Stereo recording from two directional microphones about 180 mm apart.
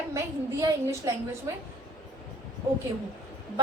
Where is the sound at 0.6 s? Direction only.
15° right (ahead or behind).